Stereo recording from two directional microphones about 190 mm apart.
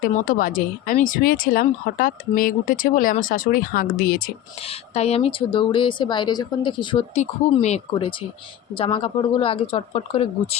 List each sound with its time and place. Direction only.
0.0 s speech: 45° left (ahead or behind)
4.6 s speech: 30° left (ahead or behind)
7.1 s speech: 35° left (ahead or behind)